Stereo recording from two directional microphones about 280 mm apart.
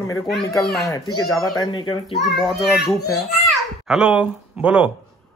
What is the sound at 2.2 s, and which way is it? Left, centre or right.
Speech, centre.